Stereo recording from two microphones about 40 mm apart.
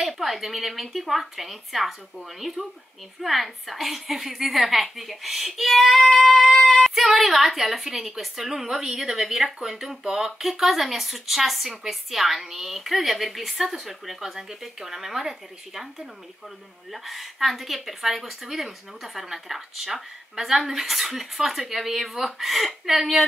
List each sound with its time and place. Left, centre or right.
0.0 s a woman's voice: centre
16.9 s a woman's voice: centre